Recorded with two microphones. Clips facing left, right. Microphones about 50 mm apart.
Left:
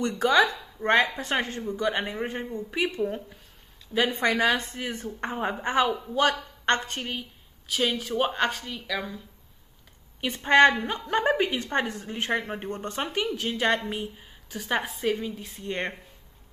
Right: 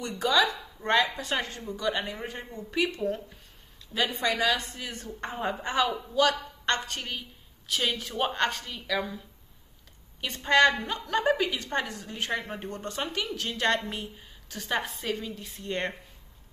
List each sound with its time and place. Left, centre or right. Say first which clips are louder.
0.2 s speech: left 3 dB; left
0.8 s a woman's voice: left 3 dB; left
4.1 s a woman's voice: left 2 dB; left
7.0 s a woman's voice: left 3 dB; centre
10.2 s a woman's voice: left 3 dB; centre